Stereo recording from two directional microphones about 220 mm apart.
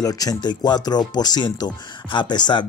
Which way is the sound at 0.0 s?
15° left (ahead or behind).